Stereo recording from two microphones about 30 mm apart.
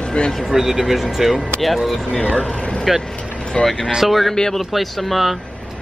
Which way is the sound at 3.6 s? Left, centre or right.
Left.